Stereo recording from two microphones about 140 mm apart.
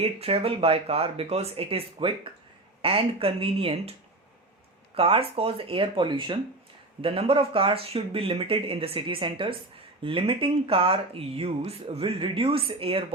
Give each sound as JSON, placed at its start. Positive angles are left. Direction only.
{"t": 0.0, "sound": "speech", "side_deg": -45}
{"t": 4.9, "sound": "speech", "side_deg": -40}